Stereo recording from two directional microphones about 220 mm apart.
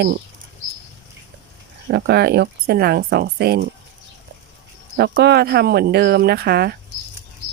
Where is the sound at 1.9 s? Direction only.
50° right (ahead or behind).